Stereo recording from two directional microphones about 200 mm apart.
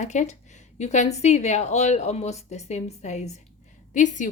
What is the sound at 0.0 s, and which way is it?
A woman's voice, 35° left (ahead or behind).